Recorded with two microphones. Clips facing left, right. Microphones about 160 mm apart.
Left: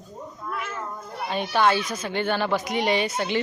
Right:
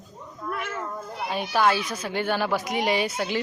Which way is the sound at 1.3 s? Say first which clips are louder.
Left 1 dB; 5° right (ahead or behind).